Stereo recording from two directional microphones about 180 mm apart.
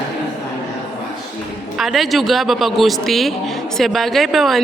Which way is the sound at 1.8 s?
Centre (ahead or behind).